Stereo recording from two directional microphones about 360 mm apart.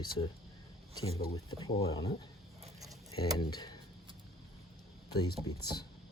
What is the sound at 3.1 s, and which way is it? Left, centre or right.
Speech, centre.